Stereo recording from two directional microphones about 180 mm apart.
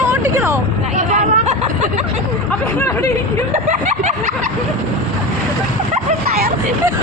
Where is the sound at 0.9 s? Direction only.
40° right (ahead or behind).